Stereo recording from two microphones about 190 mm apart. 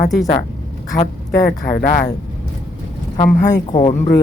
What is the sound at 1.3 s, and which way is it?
Speech, 45° left (ahead or behind).